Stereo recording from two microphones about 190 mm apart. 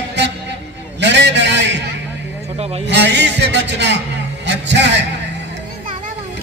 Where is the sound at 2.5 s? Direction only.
35° right (ahead or behind).